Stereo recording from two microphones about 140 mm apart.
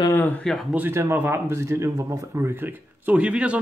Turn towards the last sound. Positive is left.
turn(degrees=-10)  # may be behind; listen again after turning